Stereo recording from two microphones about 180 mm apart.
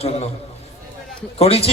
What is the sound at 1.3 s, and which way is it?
Speech, 35° left (ahead or behind).